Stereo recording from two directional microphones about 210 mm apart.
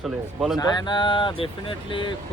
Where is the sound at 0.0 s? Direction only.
Centre (ahead or behind).